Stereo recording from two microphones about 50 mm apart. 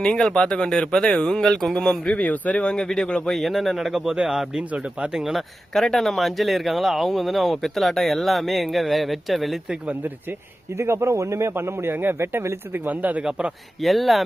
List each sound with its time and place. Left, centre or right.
0.0 s speech: centre
2.2 s speech: left
2.7 s speech: centre
3.3 s speech: centre
4.7 s speech: right
5.1 s speech: centre
5.7 s speech: centre
10.8 s speech: right
12.7 s speech: right
13.8 s speech: centre